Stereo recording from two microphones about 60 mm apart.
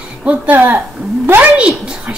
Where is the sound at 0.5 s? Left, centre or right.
Right.